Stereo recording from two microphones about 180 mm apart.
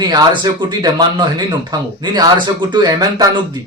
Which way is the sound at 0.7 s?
25° right (ahead or behind).